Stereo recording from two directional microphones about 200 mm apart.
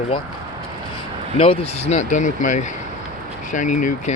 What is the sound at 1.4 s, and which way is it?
Speech, 30° left (ahead or behind).